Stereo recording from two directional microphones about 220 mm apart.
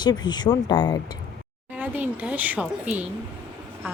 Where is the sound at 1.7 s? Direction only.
5° right (ahead or behind).